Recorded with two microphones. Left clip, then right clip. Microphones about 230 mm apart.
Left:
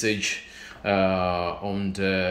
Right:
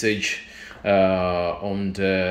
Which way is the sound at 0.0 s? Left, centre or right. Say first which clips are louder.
Right 3 dB; centre.